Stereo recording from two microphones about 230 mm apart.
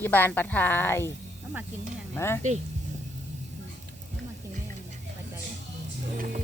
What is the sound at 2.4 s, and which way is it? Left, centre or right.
Speech, right.